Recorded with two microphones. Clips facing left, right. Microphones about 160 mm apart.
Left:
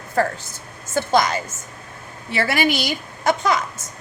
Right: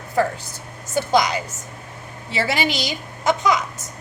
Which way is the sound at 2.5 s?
55° left (ahead or behind).